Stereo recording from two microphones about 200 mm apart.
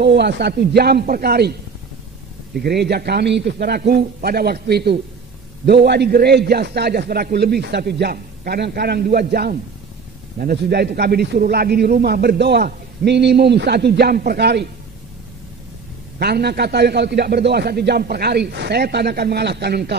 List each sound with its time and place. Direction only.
0.0 s speech: 60° right (ahead or behind)
16.2 s a man's voice: 55° right (ahead or behind)